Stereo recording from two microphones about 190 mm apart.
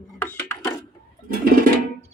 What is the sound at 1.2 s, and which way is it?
Music, 50° right (ahead or behind).